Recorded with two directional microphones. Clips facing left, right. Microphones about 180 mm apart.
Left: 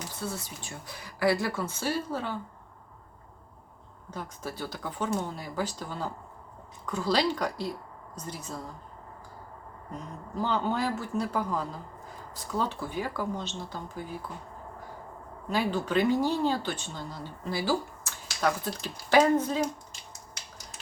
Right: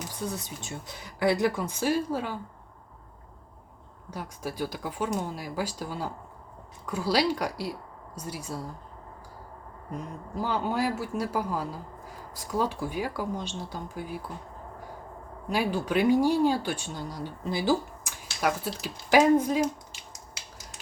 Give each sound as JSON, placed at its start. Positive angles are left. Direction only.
{"t": 0.1, "sound": "speech", "side_deg": -15}
{"t": 4.1, "sound": "speech", "side_deg": -10}
{"t": 10.3, "sound": "speech", "side_deg": -10}
{"t": 15.4, "sound": "speech", "side_deg": -10}